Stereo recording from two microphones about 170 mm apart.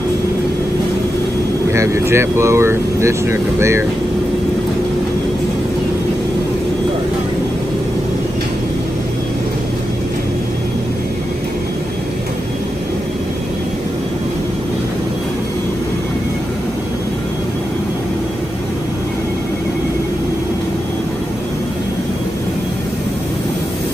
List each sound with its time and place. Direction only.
1.7 s speech: 15° right (ahead or behind)